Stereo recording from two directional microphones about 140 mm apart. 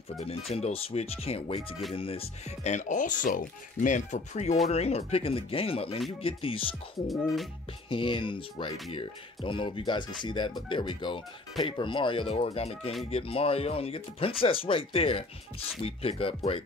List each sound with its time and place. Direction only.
0.2 s speech: 45° left (ahead or behind)
7.9 s speech: 35° left (ahead or behind)